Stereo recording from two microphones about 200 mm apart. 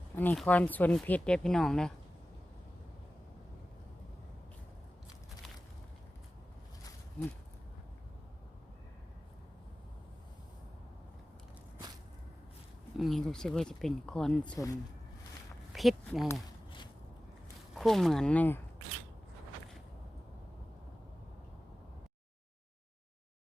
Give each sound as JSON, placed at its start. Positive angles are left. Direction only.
{"t": 0.2, "sound": "speech", "side_deg": 10}
{"t": 13.0, "sound": "speech", "side_deg": 0}
{"t": 14.5, "sound": "speech", "side_deg": 15}
{"t": 15.7, "sound": "speech", "side_deg": 0}
{"t": 16.3, "sound": "walk", "side_deg": 20}
{"t": 17.7, "sound": "speech", "side_deg": 0}